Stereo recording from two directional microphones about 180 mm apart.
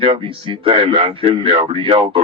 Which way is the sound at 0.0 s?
30° right (ahead or behind).